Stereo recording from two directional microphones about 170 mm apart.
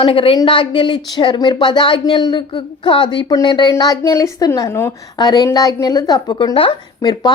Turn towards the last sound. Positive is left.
turn(degrees=25)  # may be behind; listen again after turning